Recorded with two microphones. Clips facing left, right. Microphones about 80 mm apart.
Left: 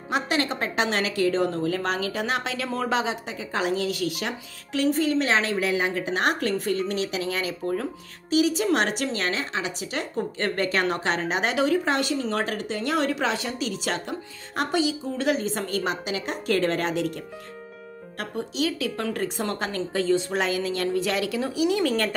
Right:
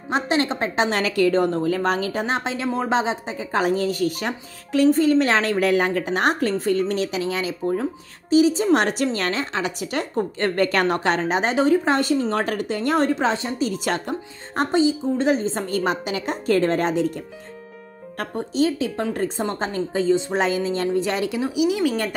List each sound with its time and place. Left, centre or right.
0.1 s a woman's voice: right
9.1 s a woman's voice: right
13.7 s speech: right
14.6 s a woman's voice: right
18.1 s a woman's voice: right; by 20.3 s centre
20.3 s a woman's voice: right
21.4 s speech: centre